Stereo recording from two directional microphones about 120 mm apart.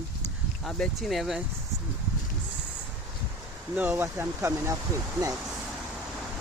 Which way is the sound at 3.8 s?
20° right (ahead or behind).